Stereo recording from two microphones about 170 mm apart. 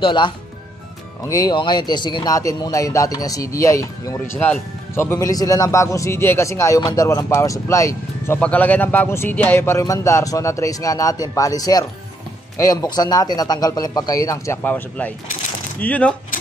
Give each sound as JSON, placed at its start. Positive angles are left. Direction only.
{"t": 0.0, "sound": "speech", "side_deg": 25}